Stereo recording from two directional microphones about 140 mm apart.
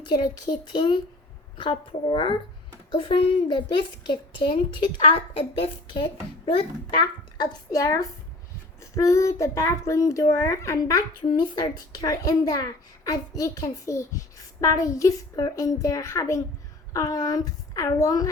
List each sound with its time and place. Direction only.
0.1 s a woman's voice: 30° left (ahead or behind)
7.3 s a child's voice: 25° left (ahead or behind)